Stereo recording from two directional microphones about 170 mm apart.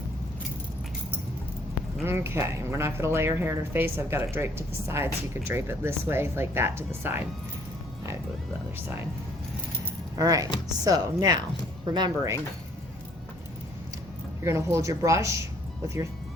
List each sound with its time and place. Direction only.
2.0 s speech: 15° right (ahead or behind)
10.2 s speech: 20° right (ahead or behind)
14.4 s speech: 15° right (ahead or behind)